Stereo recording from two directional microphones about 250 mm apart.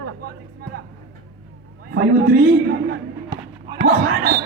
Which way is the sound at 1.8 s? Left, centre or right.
Right.